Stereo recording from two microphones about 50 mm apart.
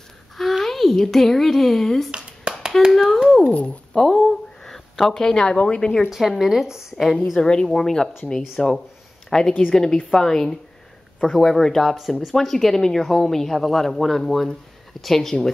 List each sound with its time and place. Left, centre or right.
0.4 s speech: centre
2.0 s a sound: centre
2.9 s speech: centre
6.0 s speech: centre
7.0 s speech: centre